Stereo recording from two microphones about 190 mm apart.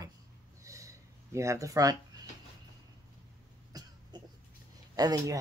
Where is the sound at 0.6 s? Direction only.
15° right (ahead or behind).